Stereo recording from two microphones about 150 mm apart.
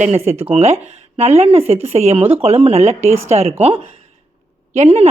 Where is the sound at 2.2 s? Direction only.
10° right (ahead or behind).